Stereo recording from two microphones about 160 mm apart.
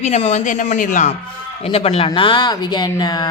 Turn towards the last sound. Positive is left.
turn(degrees=25)  # may be behind; listen again after turning